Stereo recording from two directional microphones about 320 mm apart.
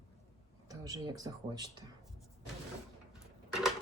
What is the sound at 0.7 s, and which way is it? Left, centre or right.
Speech, centre.